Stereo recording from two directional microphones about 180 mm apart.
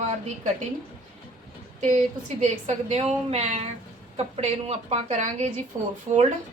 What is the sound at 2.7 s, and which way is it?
Speech, 35° right (ahead or behind).